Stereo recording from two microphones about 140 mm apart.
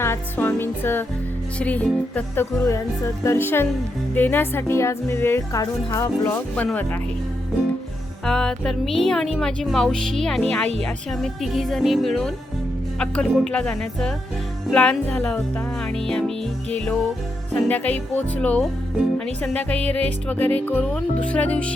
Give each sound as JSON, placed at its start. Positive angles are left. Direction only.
{"t": 0.0, "sound": "speech", "side_deg": 15}
{"t": 8.2, "sound": "speech", "side_deg": 5}